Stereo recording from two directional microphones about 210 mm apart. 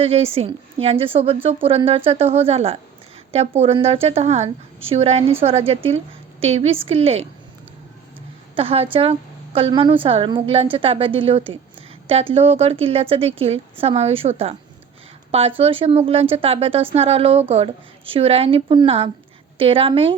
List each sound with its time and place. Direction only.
0.0 s a woman's voice: 30° right (ahead or behind)
8.5 s a woman's voice: 25° right (ahead or behind)